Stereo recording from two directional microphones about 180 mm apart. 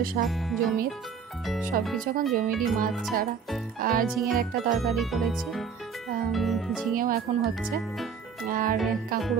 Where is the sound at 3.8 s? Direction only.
50° right (ahead or behind).